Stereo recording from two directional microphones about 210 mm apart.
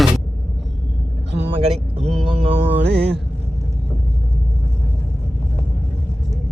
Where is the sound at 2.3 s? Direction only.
30° right (ahead or behind).